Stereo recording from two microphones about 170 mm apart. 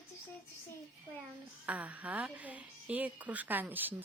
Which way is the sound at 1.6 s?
10° right (ahead or behind).